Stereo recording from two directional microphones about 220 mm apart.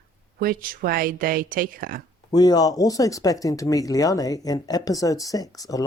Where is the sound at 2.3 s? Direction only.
20° left (ahead or behind).